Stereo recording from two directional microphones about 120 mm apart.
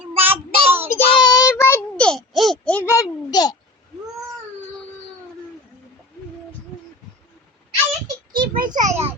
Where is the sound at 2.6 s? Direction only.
15° left (ahead or behind); by 3.5 s 35° left (ahead or behind).